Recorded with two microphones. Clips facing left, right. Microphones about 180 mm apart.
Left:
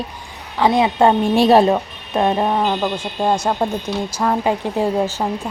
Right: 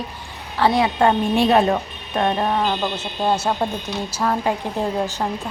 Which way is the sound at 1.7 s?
20° left (ahead or behind).